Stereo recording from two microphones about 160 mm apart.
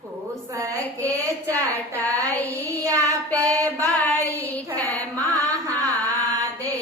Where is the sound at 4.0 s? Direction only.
10° left (ahead or behind).